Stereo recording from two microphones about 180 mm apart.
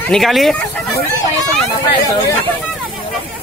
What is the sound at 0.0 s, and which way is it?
Speech, centre (ahead or behind).